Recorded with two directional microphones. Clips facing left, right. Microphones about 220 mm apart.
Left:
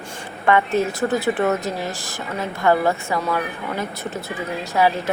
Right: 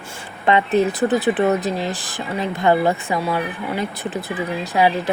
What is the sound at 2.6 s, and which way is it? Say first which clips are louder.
Speech: right 1 dB; 20° right (ahead or behind).